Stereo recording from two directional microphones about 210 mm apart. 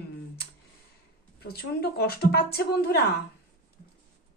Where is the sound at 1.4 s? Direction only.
50° left (ahead or behind).